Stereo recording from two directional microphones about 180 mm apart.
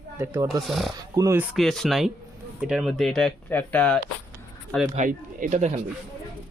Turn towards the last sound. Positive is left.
turn(degrees=-40)  # may be behind; listen again after turning